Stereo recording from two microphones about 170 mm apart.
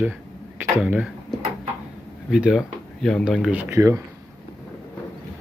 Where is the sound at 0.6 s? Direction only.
10° right (ahead or behind).